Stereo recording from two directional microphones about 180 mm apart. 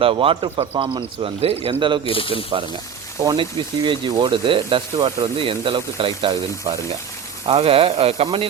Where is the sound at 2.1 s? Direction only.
30° left (ahead or behind).